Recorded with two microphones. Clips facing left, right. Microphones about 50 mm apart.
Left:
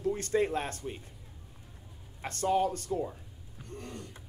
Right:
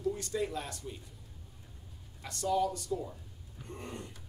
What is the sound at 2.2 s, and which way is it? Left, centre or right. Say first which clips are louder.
Speech: left 3 dB; left.